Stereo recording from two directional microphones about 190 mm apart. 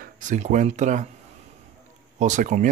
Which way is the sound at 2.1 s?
40° right (ahead or behind).